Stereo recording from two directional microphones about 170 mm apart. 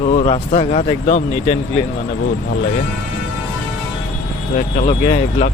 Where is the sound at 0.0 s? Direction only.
40° left (ahead or behind).